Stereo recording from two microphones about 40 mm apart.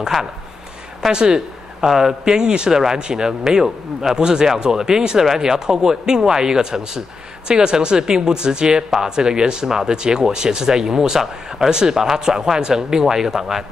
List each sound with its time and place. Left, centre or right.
0.1 s speech: centre
1.1 s speech: centre
2.4 s speech: right
2.7 s speech: centre